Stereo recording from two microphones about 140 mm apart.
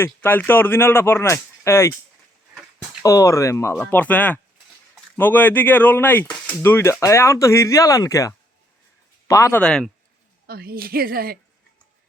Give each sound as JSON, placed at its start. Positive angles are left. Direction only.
{"t": 0.0, "sound": "speech", "side_deg": 15}
{"t": 3.0, "sound": "speech", "side_deg": 20}
{"t": 9.6, "sound": "speech", "side_deg": 5}
{"t": 10.4, "sound": "a woman's voice", "side_deg": -90}